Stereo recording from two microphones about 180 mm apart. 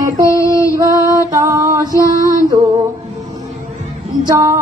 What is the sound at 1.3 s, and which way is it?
Female singing, 20° right (ahead or behind).